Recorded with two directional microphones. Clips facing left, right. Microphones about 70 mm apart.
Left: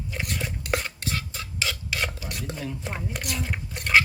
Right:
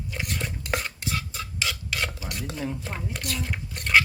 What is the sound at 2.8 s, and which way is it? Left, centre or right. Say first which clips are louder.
Speech: left 1 dB; centre.